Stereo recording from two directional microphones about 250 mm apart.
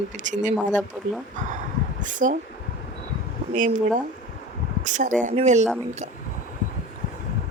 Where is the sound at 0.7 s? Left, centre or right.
Centre.